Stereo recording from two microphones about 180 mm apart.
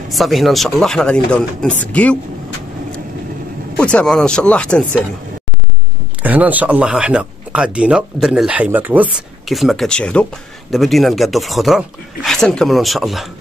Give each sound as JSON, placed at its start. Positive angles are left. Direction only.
{"t": 0.1, "sound": "speech", "side_deg": 0}
{"t": 3.7, "sound": "speech", "side_deg": 5}
{"t": 6.2, "sound": "speech", "side_deg": -10}